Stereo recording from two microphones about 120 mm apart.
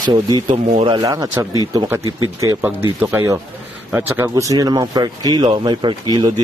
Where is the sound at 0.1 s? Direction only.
40° right (ahead or behind).